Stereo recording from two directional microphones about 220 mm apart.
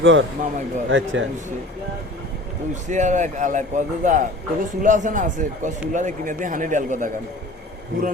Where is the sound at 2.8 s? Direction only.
35° right (ahead or behind).